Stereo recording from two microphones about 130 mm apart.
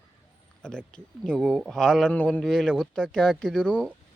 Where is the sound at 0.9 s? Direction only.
5° left (ahead or behind).